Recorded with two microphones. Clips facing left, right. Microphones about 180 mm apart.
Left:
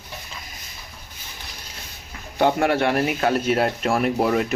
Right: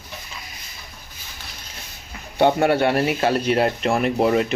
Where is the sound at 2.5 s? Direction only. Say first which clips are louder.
Right 2 dB; 35° right (ahead or behind).